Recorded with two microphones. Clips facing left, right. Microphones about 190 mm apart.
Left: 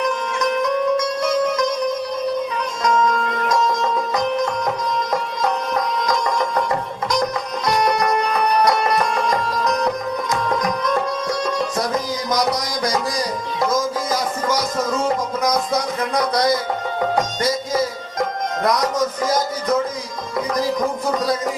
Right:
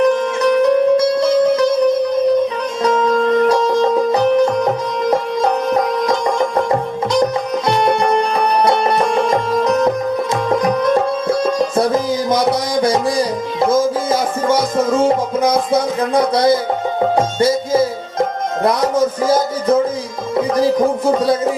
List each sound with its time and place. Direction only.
0.4 s music: 35° right (ahead or behind)
2.8 s music: 30° right (ahead or behind)
6.7 s music: 30° right (ahead or behind)
20.6 s speech: 30° right (ahead or behind)